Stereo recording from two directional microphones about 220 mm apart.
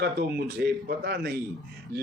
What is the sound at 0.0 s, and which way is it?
Speech, 45° right (ahead or behind).